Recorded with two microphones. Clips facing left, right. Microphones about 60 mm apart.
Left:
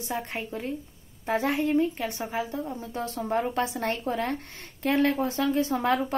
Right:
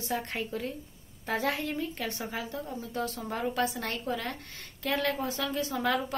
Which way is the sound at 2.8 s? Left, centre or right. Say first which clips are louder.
Left 2 dB; left.